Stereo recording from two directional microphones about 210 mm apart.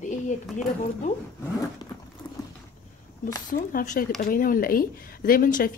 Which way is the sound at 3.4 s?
40° left (ahead or behind).